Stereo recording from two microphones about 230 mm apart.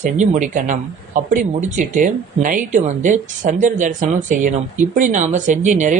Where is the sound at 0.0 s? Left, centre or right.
Right.